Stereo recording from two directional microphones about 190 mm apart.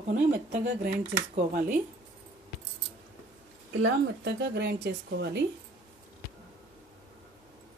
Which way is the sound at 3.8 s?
65° right (ahead or behind).